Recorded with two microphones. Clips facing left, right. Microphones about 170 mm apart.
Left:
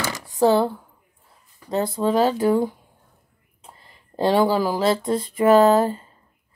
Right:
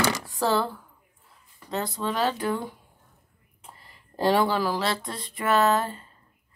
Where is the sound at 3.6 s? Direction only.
20° left (ahead or behind).